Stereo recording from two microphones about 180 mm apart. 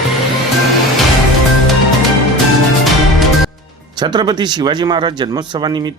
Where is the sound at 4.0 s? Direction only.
25° right (ahead or behind).